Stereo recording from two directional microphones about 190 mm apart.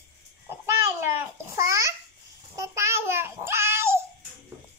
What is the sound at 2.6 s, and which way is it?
Child singing, 15° right (ahead or behind).